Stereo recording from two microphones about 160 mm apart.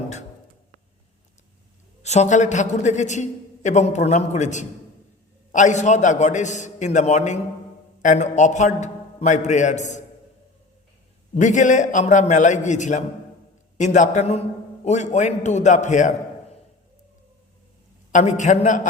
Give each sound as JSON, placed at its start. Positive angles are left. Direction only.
{"t": 2.0, "sound": "a man's voice", "side_deg": 45}
{"t": 11.3, "sound": "a man's voice", "side_deg": 50}
{"t": 18.1, "sound": "a man's voice", "side_deg": 50}